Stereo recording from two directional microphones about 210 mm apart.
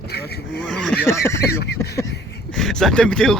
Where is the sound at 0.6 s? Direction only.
5° left (ahead or behind).